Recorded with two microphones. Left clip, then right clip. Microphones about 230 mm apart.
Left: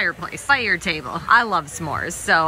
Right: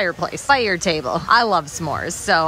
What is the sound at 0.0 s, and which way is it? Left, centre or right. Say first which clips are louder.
Speech: right 2 dB; centre.